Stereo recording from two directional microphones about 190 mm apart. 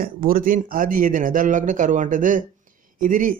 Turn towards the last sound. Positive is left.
turn(degrees=-45)  # may be behind; listen again after turning